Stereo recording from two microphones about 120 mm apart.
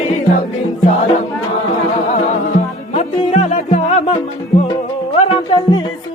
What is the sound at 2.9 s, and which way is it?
Music, 65° left (ahead or behind).